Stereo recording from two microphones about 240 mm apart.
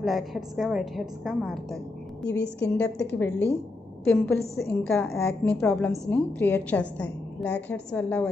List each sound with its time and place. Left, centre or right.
0.0 s a woman's voice: centre
2.2 s a woman's voice: left
2.8 s a woman's voice: centre